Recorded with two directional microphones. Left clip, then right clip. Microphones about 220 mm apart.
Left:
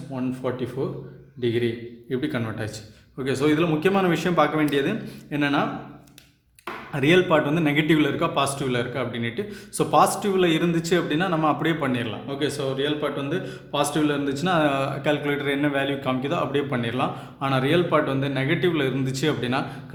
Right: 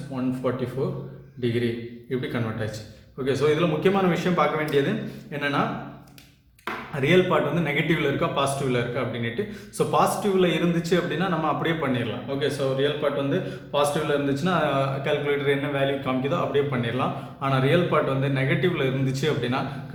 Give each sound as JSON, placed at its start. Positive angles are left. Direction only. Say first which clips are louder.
{"t": 0.8, "sound": "speech", "louder": "even", "side_deg": 35}
{"t": 2.0, "sound": "a man's voice", "louder": "left 2 dB", "side_deg": 45}
{"t": 6.9, "sound": "a man's voice", "louder": "left 2 dB", "side_deg": 45}